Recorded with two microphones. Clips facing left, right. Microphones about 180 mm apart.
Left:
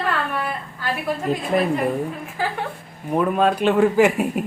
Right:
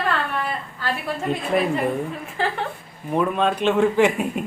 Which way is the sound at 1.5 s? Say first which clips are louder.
Left 1 dB; centre (ahead or behind).